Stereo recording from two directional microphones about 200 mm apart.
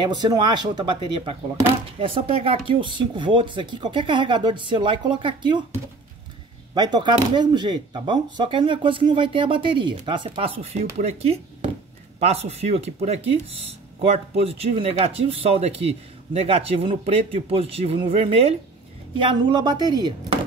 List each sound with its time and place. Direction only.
0.0 s speech: 20° right (ahead or behind)
6.7 s speech: 20° right (ahead or behind)